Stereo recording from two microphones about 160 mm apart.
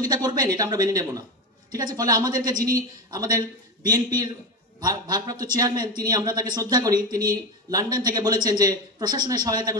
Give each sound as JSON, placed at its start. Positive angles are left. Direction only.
{"t": 0.0, "sound": "a man's voice", "side_deg": -25}